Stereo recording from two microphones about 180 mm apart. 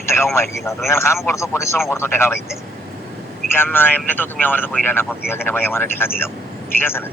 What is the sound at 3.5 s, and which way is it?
Speech, 10° left (ahead or behind).